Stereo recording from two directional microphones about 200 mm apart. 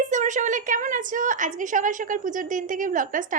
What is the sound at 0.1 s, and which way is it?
A woman's voice, 40° right (ahead or behind).